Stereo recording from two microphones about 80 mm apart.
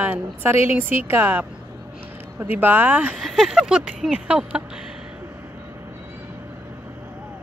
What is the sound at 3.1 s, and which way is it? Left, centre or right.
Speech, centre.